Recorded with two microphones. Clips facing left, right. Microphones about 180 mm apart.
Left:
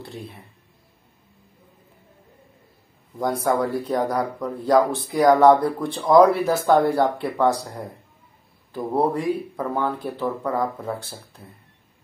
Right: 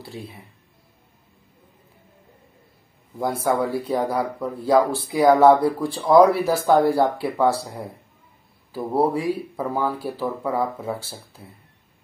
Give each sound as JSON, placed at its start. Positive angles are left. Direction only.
{"t": 3.4, "sound": "speech", "side_deg": -5}